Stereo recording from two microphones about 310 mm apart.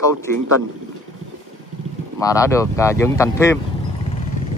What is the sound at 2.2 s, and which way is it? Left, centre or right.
Speech, centre.